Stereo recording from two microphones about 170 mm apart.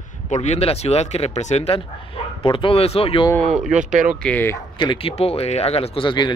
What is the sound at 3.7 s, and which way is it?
Speech, 45° right (ahead or behind).